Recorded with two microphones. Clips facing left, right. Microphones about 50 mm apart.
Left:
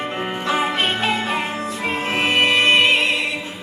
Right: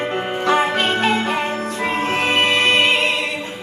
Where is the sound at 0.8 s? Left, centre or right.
Right.